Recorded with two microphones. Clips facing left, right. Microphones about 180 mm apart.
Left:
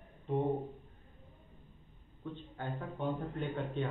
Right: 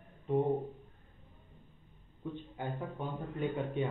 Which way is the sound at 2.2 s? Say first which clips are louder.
Right 2 dB; 10° right (ahead or behind).